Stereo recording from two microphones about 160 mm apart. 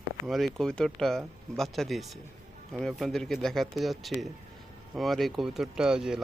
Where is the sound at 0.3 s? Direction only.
Centre (ahead or behind).